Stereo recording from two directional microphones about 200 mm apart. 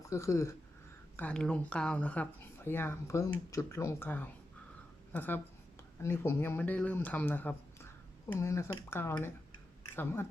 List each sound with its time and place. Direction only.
0.1 s speech: 15° left (ahead or behind)